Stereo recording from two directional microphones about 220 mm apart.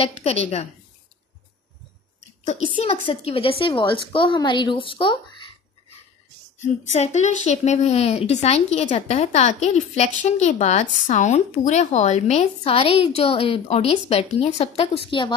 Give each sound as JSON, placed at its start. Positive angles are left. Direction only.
{"t": 0.0, "sound": "a woman's voice", "side_deg": 30}
{"t": 2.8, "sound": "a woman's voice", "side_deg": 25}
{"t": 6.6, "sound": "a woman's voice", "side_deg": 30}